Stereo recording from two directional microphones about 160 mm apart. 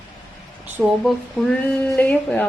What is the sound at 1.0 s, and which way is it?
Speech, centre (ahead or behind).